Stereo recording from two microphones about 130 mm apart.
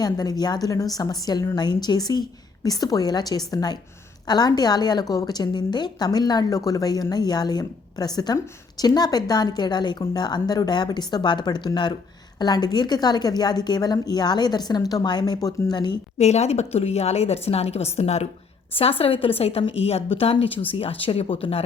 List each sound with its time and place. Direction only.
0.0 s a woman's voice: 30° left (ahead or behind)
16.1 s a woman's voice: 60° left (ahead or behind)